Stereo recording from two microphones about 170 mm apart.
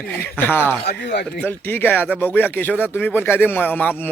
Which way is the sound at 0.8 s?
80° left.